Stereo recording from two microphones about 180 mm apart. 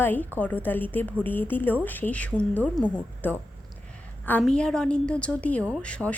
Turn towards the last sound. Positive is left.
turn(degrees=5)  # may be behind; listen again after turning